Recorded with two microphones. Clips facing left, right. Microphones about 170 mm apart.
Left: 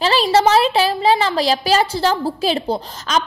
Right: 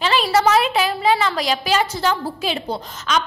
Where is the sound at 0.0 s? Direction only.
35° left (ahead or behind).